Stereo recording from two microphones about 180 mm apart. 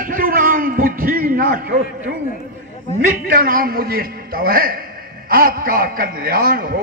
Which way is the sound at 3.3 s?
50° right (ahead or behind).